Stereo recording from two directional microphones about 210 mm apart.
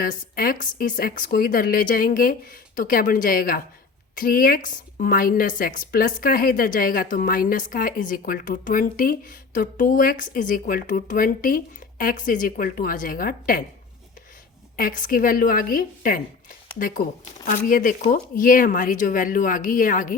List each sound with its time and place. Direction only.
0.0 s a woman's voice: 40° left (ahead or behind)
14.8 s a woman's voice: 40° left (ahead or behind)